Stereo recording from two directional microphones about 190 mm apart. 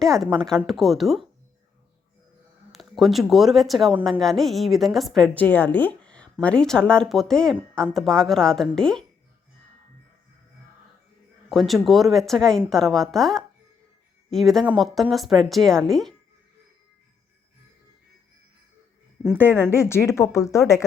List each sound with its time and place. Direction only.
0.7 s speech: centre (ahead or behind)
2.7 s speech: centre (ahead or behind)
6.0 s a sound: 5° left (ahead or behind)
6.4 s speech: 5° left (ahead or behind)
11.4 s speech: centre (ahead or behind)
19.7 s speech: 15° left (ahead or behind)